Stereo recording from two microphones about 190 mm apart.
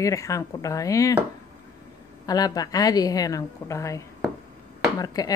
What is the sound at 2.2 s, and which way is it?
Speech, 20° left (ahead or behind).